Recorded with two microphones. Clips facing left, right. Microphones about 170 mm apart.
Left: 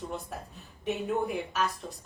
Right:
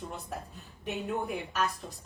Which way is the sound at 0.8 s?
Centre (ahead or behind).